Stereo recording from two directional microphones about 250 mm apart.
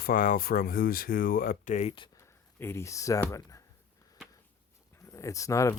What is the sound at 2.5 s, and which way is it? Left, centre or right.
Speech, centre.